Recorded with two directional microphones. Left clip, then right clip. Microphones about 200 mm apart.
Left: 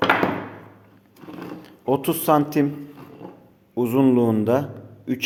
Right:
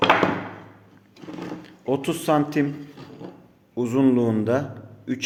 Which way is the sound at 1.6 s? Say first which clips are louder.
Left 3 dB; 15° left (ahead or behind).